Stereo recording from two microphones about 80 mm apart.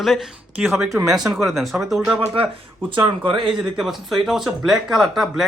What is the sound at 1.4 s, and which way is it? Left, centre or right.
Speech, centre.